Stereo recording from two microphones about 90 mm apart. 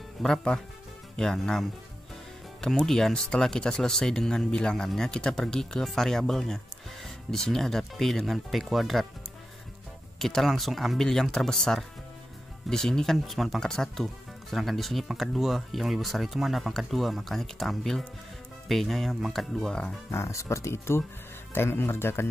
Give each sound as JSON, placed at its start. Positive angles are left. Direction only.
{"t": 0.2, "sound": "speech", "side_deg": 5}
{"t": 10.1, "sound": "speech", "side_deg": 0}
{"t": 20.1, "sound": "speech", "side_deg": 30}